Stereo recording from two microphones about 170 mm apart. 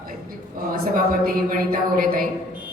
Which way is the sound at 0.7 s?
55° right (ahead or behind).